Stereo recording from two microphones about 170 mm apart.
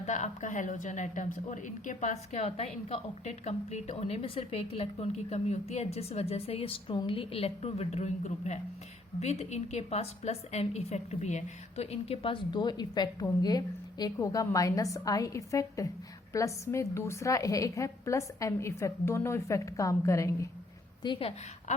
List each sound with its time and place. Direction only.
0.0 s a woman's voice: 45° left (ahead or behind); by 20.5 s 20° left (ahead or behind)
21.0 s a woman's voice: 30° left (ahead or behind)